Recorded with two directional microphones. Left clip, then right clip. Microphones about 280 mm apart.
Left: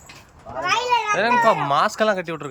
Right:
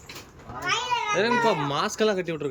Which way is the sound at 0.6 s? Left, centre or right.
Left.